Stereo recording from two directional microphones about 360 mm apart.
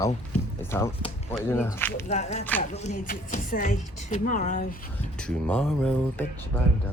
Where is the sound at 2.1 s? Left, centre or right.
Centre.